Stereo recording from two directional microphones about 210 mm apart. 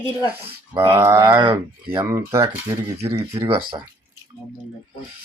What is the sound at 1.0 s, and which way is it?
Speech, 10° right (ahead or behind).